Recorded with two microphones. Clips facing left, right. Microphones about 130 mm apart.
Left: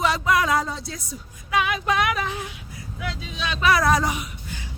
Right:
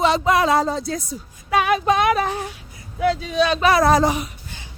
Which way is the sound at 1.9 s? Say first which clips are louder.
Right 5 dB; 30° right (ahead or behind).